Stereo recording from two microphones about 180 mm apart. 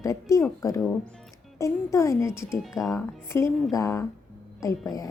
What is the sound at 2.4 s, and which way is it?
Speech, centre (ahead or behind).